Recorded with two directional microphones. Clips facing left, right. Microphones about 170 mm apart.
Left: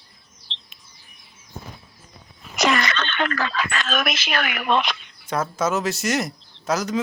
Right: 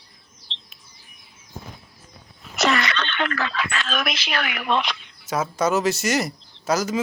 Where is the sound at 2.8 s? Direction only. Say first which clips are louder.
Left 1 dB; 45° left (ahead or behind).